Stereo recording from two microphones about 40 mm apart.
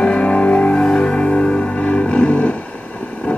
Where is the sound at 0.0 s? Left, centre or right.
Left.